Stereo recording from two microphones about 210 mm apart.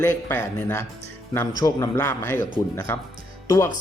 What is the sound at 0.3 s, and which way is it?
Speech, 10° left (ahead or behind).